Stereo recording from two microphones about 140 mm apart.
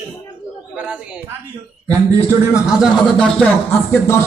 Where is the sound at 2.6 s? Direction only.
Centre (ahead or behind).